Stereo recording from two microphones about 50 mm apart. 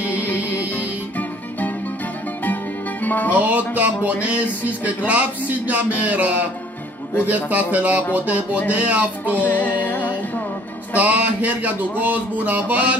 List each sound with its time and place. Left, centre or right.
0.1 s music: left
3.3 s speech: right
9.3 s music: left
11.0 s speech: right